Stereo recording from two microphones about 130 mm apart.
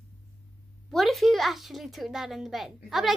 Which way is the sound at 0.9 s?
Centre (ahead or behind).